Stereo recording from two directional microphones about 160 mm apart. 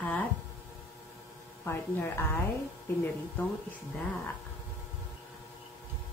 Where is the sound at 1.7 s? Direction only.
15° left (ahead or behind).